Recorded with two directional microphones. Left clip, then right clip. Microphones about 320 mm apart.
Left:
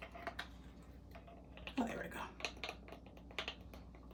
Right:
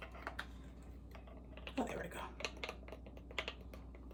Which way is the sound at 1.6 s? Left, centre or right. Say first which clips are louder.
Even; centre.